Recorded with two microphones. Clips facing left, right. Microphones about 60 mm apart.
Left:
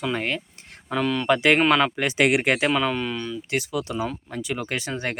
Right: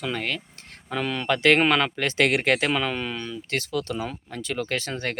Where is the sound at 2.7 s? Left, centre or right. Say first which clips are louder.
Left 3 dB; centre.